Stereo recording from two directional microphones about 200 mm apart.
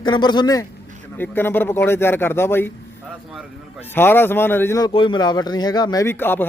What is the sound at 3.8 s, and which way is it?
Speech, 10° left (ahead or behind).